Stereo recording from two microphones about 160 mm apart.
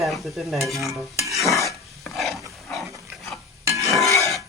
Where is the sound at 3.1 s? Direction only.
Centre (ahead or behind).